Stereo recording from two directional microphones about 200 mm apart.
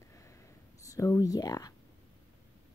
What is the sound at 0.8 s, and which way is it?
Speech, 15° left (ahead or behind).